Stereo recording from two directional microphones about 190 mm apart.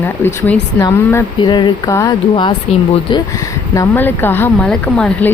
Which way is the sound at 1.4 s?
25° left (ahead or behind).